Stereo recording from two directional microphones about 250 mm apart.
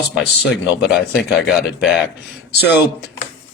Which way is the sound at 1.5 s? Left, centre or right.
Centre.